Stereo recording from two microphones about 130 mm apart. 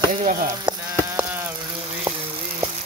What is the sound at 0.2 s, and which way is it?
Speech, 90° right.